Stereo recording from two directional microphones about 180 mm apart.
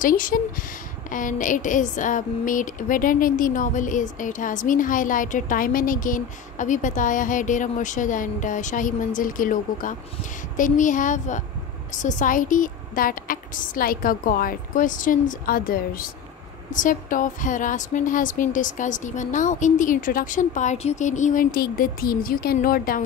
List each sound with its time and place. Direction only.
0.0 s a woman's voice: 50° left (ahead or behind)